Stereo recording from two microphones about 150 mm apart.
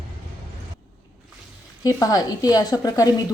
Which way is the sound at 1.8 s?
25° left (ahead or behind).